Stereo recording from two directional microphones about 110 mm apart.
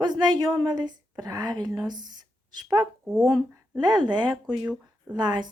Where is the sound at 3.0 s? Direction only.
Centre (ahead or behind).